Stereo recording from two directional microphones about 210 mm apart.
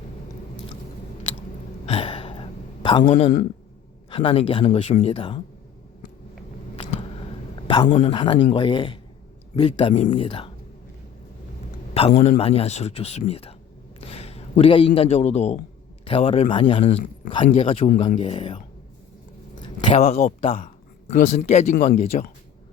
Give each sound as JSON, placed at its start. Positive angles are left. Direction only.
{"t": 1.9, "sound": "gasp", "side_deg": 25}
{"t": 3.0, "sound": "a man's voice", "side_deg": 35}
{"t": 7.9, "sound": "speech", "side_deg": 35}
{"t": 8.1, "sound": "a man's voice", "side_deg": 25}
{"t": 11.9, "sound": "a man's voice", "side_deg": 30}
{"t": 19.6, "sound": "a sound", "side_deg": 25}
{"t": 20.1, "sound": "a man's voice", "side_deg": 30}